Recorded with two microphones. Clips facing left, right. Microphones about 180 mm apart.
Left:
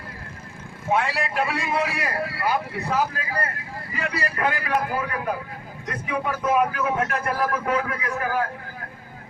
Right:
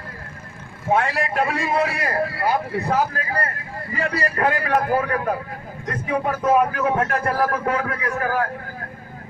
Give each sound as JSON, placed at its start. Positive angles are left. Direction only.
{"t": 0.9, "sound": "a man's voice", "side_deg": -50}